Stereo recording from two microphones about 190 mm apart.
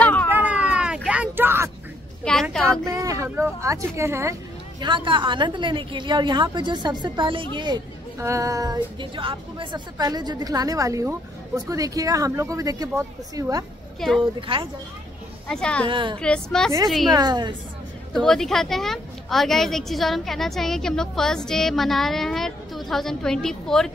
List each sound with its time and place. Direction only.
0.0 s cat: 10° left (ahead or behind)
0.3 s a sound: 10° right (ahead or behind)
2.3 s a sound: 5° left (ahead or behind)
2.8 s speech: 15° right (ahead or behind)
13.9 s a woman's voice: centre (ahead or behind)
14.5 s speech: 30° right (ahead or behind)
15.4 s a woman's voice: 5° left (ahead or behind)
15.9 s speech: 25° right (ahead or behind)
16.2 s a woman's voice: 5° left (ahead or behind)
17.1 s speech: 20° right (ahead or behind)
18.1 s a woman's voice: 5° left (ahead or behind)